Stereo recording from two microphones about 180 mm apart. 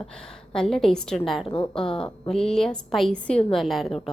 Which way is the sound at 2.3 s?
Centre (ahead or behind).